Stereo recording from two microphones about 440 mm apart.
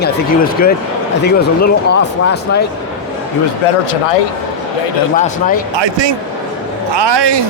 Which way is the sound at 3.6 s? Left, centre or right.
Left.